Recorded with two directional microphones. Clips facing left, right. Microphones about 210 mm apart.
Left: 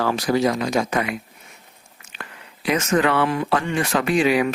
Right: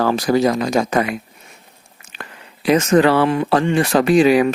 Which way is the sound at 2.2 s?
35° right (ahead or behind).